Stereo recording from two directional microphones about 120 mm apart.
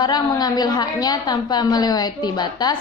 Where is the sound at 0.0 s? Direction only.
40° left (ahead or behind).